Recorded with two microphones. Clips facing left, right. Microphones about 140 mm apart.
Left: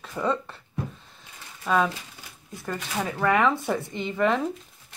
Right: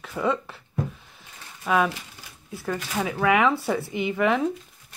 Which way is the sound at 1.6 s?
10° right (ahead or behind).